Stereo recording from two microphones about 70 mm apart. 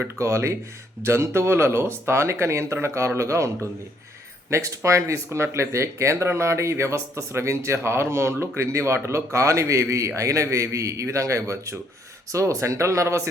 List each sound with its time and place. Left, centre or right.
0.0 s speech: right